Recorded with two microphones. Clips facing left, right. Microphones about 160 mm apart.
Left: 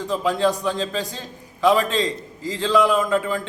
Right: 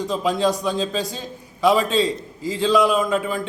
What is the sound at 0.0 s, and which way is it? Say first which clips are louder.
A man's voice: even; 15° right (ahead or behind).